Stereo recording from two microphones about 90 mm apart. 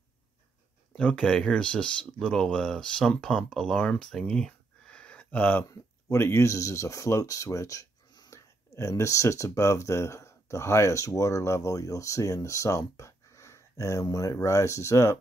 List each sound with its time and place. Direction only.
0.9 s speech: 10° left (ahead or behind)
5.7 s speech: 30° left (ahead or behind)
8.3 s speech: 35° left (ahead or behind)